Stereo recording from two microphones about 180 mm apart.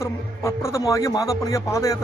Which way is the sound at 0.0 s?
15° left (ahead or behind).